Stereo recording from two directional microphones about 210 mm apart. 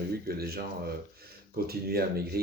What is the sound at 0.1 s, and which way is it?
Speech, 45° right (ahead or behind).